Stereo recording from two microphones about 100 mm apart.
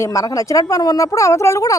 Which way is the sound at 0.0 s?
30° left (ahead or behind).